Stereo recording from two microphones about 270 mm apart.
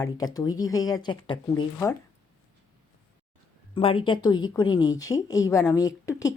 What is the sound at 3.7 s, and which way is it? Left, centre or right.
Speech, centre.